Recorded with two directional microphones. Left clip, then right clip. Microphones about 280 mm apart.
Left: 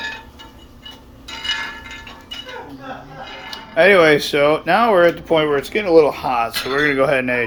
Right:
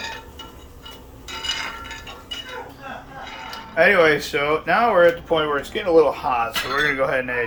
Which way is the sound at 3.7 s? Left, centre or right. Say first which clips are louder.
Left 4 dB; left.